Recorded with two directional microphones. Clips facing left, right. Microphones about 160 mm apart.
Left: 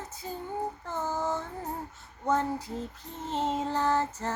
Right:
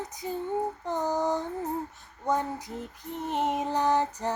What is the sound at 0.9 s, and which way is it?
Female singing, 15° right (ahead or behind).